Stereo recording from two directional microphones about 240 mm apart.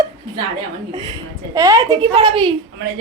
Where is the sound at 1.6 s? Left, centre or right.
Centre.